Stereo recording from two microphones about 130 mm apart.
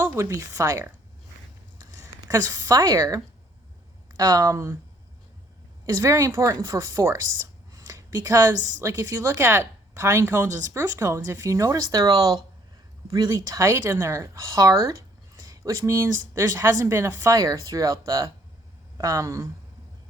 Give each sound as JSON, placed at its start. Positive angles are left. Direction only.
{"t": 0.0, "sound": "a woman's voice", "side_deg": -20}
{"t": 4.2, "sound": "a woman's voice", "side_deg": -30}
{"t": 5.8, "sound": "a woman's voice", "side_deg": -25}
{"t": 7.7, "sound": "a sound", "side_deg": -25}
{"t": 8.5, "sound": "a woman's voice", "side_deg": -80}
{"t": 8.8, "sound": "a woman's voice", "side_deg": -25}